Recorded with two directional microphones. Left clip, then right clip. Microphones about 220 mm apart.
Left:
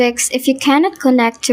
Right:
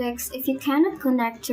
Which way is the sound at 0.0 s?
35° left (ahead or behind).